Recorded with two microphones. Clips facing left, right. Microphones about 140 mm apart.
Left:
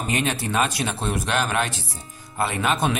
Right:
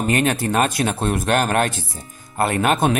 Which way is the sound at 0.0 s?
50° right (ahead or behind).